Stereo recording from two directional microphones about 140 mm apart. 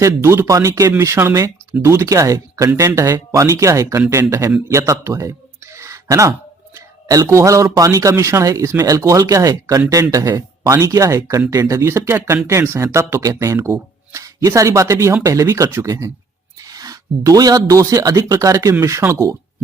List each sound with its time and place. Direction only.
0.0 s speech: 20° right (ahead or behind)